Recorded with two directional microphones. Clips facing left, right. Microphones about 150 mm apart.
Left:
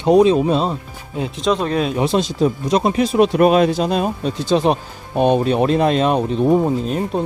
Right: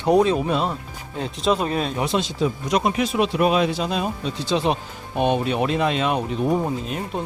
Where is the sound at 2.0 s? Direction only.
35° left (ahead or behind).